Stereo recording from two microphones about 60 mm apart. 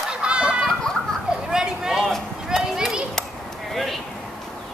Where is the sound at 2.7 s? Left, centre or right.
Centre.